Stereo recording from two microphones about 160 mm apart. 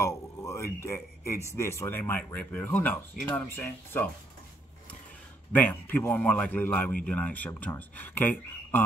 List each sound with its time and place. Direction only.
0.0 s a sound: 15° left (ahead or behind)
0.8 s a man's voice: 15° left (ahead or behind)
5.5 s speech: 10° left (ahead or behind)